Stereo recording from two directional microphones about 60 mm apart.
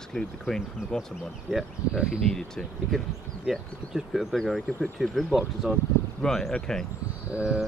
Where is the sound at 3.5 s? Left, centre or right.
Centre.